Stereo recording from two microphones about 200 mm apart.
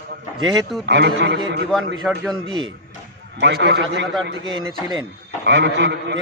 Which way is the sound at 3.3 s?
60° right (ahead or behind).